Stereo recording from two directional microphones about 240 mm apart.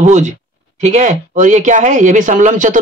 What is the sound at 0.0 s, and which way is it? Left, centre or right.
Speech, right.